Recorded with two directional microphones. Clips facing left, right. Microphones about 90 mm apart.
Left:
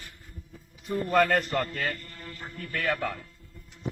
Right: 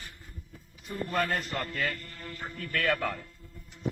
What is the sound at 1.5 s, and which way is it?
Speech, 40° left (ahead or behind).